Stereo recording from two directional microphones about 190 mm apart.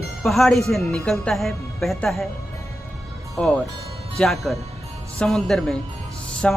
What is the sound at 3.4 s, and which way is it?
Speech, 5° left (ahead or behind).